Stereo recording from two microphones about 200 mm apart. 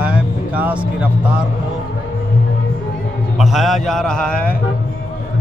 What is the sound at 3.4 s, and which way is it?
Speech, centre (ahead or behind).